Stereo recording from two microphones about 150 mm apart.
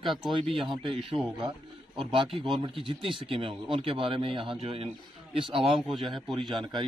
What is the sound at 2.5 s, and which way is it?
A man's voice, 35° right (ahead or behind).